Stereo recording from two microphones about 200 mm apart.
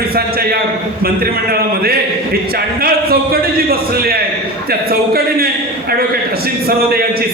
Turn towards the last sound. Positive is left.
turn(degrees=-50)  # may be behind; listen again after turning